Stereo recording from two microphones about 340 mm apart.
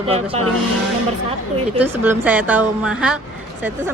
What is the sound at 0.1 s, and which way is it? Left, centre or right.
Speech, centre.